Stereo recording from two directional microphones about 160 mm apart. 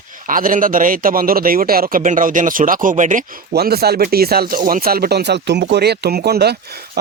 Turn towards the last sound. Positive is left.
turn(degrees=-85)